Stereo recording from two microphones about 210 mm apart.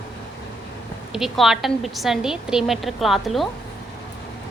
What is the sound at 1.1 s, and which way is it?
A woman's voice, centre (ahead or behind).